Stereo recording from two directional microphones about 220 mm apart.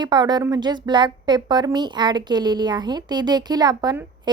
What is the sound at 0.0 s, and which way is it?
A woman's voice, 20° right (ahead or behind).